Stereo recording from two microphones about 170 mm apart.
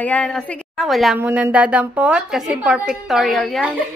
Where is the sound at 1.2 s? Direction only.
10° right (ahead or behind).